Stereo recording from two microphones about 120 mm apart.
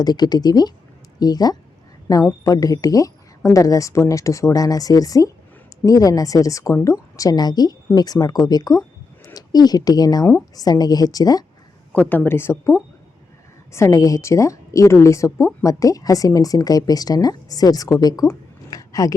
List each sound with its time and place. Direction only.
0.0 s speech: 35° left (ahead or behind)
11.9 s speech: 15° left (ahead or behind)
13.7 s speech: 25° left (ahead or behind)